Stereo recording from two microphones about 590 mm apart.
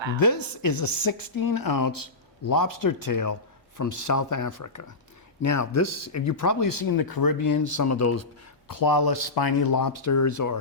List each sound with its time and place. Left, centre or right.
0.2 s speech: left